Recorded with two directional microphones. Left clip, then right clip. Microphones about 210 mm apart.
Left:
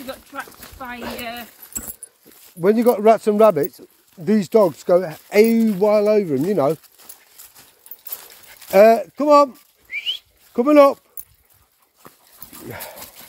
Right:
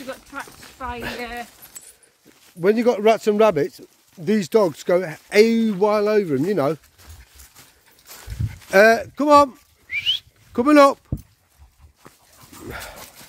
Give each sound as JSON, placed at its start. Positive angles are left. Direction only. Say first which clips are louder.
{"t": 0.1, "sound": "a sound", "louder": "left 1 dB", "side_deg": 20}
{"t": 2.6, "sound": "speech", "louder": "left 2 dB", "side_deg": -10}
{"t": 8.1, "sound": "a sound", "louder": "left 1 dB", "side_deg": 40}
{"t": 8.6, "sound": "whistling", "louder": "left 2 dB", "side_deg": -15}
{"t": 12.0, "sound": "dog", "louder": "left 2 dB", "side_deg": 50}
{"t": 12.6, "sound": "dog", "louder": "even", "side_deg": -10}